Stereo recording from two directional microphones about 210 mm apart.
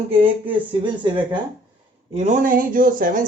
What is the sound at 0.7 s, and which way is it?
Speech, 20° right (ahead or behind).